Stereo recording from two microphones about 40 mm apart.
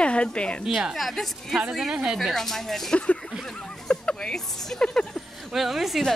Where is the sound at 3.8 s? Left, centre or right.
Left.